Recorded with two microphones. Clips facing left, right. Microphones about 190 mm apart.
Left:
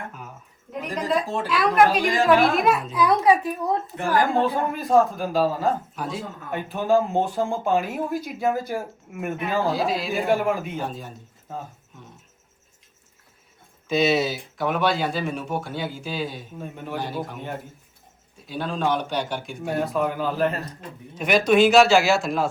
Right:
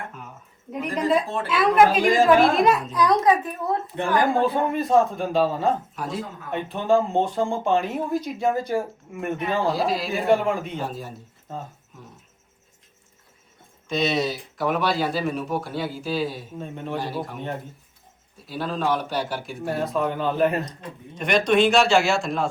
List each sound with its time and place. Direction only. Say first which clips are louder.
1.5 s a man's voice: right 1 dB; centre (ahead or behind)
3.9 s a woman's voice: right 1 dB; 20° right (ahead or behind)
4.4 s a man's voice: right 1 dB; centre (ahead or behind)
13.8 s a man's voice: left 3 dB; 5° left (ahead or behind)